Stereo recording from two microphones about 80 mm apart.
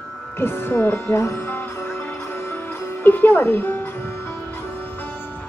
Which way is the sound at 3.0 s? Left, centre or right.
Left.